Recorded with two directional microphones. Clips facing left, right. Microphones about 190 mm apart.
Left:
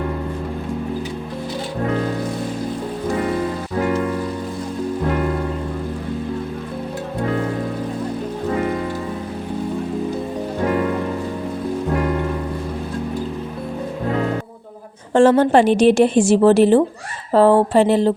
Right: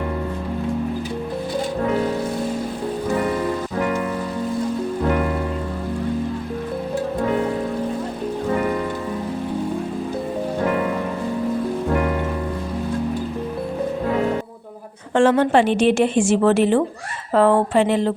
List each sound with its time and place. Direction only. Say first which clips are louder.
15.1 s a woman's voice: left 3 dB; 40° left (ahead or behind)